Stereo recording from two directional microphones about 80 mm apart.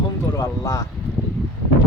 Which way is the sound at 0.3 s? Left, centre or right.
Left.